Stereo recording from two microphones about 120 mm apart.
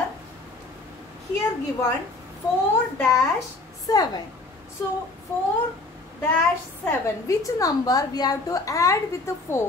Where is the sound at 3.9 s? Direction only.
30° left (ahead or behind).